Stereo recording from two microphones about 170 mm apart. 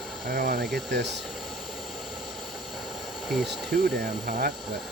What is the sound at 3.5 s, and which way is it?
Speech, 65° right (ahead or behind).